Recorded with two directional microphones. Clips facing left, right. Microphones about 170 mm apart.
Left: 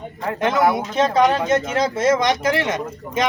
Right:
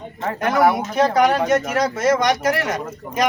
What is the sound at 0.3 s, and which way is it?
Speech, 25° left (ahead or behind).